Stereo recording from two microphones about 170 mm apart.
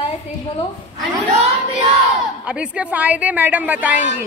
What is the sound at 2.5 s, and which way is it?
A woman's voice, 5° right (ahead or behind).